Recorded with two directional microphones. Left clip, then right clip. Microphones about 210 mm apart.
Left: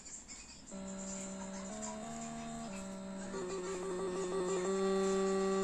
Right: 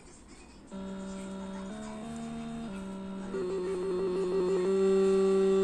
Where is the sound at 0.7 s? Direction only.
5° right (ahead or behind).